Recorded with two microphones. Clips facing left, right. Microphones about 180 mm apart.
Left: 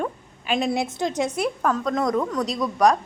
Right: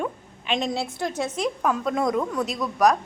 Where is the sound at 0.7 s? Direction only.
20° left (ahead or behind).